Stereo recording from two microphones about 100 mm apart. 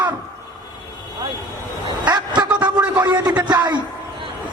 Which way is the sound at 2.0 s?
45° right (ahead or behind).